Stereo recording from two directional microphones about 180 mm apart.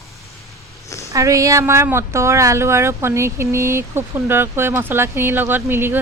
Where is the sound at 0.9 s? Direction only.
15° left (ahead or behind).